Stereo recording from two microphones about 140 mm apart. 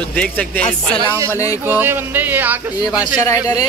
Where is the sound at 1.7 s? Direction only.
15° right (ahead or behind).